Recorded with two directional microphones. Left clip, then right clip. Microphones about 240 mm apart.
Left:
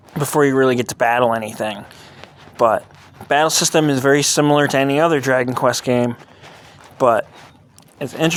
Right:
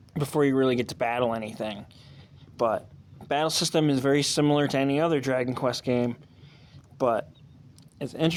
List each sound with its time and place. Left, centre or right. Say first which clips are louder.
0.1 s speech: left 9 dB; left